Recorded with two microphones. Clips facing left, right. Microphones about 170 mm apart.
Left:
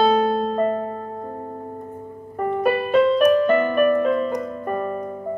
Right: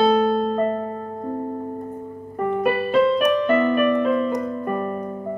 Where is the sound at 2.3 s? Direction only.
40° left (ahead or behind).